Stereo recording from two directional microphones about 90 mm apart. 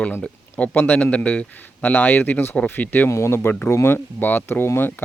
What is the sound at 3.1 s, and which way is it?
Speech, 30° left (ahead or behind).